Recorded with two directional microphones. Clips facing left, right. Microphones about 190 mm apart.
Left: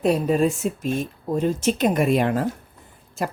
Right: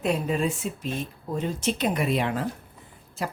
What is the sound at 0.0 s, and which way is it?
Speech, 40° left (ahead or behind).